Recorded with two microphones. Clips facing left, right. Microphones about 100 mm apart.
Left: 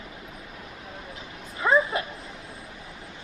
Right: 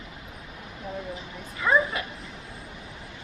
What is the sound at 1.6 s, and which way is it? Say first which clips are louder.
Speech: left 1 dB; 30° left (ahead or behind).